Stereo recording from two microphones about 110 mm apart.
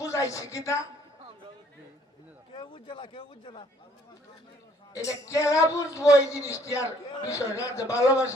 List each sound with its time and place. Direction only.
0.0 s a woman's voice: 30° left (ahead or behind)
2.5 s a man's voice: 50° left (ahead or behind)
4.9 s speech: 30° left (ahead or behind)